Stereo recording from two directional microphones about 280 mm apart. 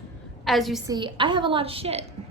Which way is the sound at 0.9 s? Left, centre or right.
Centre.